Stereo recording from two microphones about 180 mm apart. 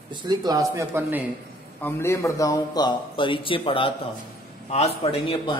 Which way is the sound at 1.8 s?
10° left (ahead or behind).